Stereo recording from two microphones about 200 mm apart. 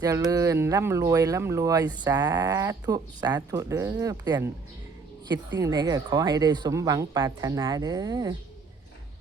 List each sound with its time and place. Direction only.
0.0 s speech: 15° right (ahead or behind)
5.5 s speech: 20° right (ahead or behind)